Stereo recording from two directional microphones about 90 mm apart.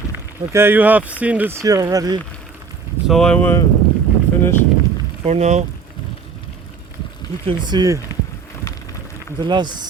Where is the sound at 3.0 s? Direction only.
Centre (ahead or behind).